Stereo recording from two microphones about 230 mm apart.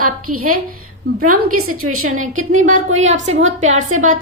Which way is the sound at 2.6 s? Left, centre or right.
Right.